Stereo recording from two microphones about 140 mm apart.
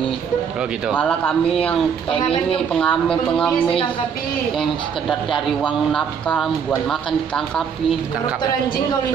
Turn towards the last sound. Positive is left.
turn(degrees=5)  # may be behind; listen again after turning